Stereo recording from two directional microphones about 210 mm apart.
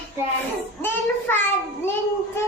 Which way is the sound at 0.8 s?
10° left (ahead or behind).